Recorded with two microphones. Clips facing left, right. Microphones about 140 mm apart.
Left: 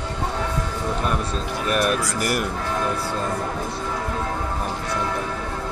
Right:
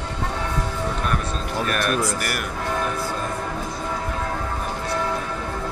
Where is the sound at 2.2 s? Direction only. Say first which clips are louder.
Left 4 dB; 25° left (ahead or behind).